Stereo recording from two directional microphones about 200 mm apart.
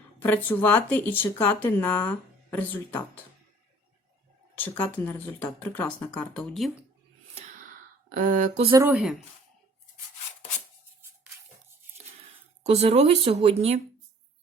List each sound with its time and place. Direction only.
0.2 s speech: 10° left (ahead or behind)
4.5 s speech: 10° left (ahead or behind)
8.1 s speech: 40° right (ahead or behind)
8.7 s speech: 15° right (ahead or behind)
12.6 s speech: 30° right (ahead or behind)